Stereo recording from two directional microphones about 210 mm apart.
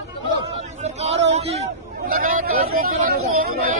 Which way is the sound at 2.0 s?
40° right (ahead or behind).